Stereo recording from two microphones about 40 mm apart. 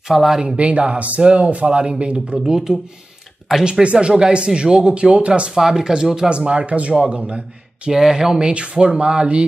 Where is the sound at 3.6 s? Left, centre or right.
Right.